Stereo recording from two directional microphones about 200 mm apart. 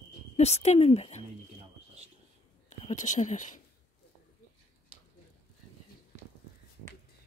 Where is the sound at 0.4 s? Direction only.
30° left (ahead or behind).